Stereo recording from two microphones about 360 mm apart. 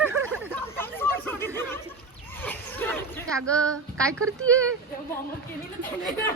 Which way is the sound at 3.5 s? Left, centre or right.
Centre.